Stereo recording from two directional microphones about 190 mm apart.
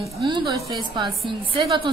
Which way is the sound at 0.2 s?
25° right (ahead or behind).